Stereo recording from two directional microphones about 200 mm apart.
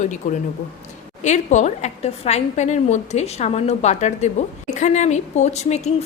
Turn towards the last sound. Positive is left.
turn(degrees=35)  # may be behind; listen again after turning